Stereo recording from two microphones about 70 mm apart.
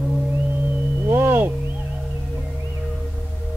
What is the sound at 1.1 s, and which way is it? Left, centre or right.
Owl, right.